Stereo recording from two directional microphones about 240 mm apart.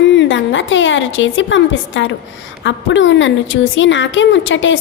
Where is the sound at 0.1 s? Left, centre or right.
Left.